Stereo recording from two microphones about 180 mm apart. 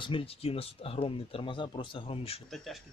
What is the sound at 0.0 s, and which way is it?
Speech, 30° left (ahead or behind).